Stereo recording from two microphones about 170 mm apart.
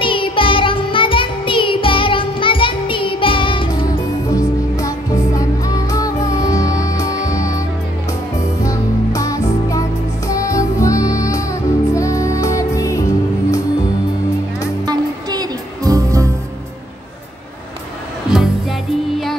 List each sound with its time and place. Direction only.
0.0 s music: 30° left (ahead or behind)
4.3 s music: 20° left (ahead or behind)
8.6 s music: 20° left (ahead or behind)
14.9 s music: 25° right (ahead or behind)
18.3 s music: centre (ahead or behind)